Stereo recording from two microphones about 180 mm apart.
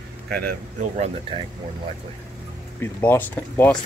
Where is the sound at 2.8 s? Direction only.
10° left (ahead or behind).